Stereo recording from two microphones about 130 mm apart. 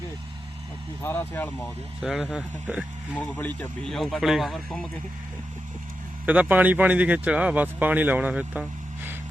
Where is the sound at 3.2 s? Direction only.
15° left (ahead or behind).